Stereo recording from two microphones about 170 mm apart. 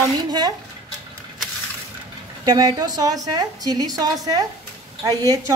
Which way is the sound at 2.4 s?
25° right (ahead or behind).